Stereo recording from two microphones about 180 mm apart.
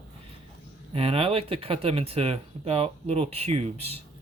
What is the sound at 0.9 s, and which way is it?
Speech, 30° right (ahead or behind).